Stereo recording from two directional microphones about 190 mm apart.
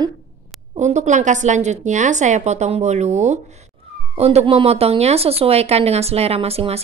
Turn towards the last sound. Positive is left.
turn(degrees=-30)  # may be behind; listen again after turning